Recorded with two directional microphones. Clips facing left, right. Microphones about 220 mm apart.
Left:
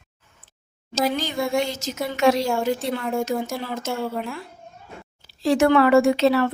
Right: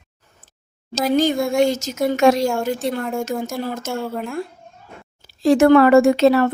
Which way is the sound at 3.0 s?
Centre (ahead or behind).